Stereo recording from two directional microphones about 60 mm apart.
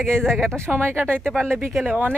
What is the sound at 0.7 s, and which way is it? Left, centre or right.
Speech, right.